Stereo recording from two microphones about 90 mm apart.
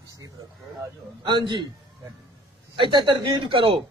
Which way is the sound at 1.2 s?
60° right (ahead or behind).